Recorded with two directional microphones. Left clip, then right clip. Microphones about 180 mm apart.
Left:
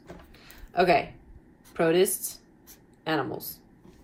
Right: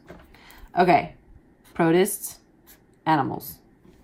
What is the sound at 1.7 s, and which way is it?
Speech, 35° right (ahead or behind).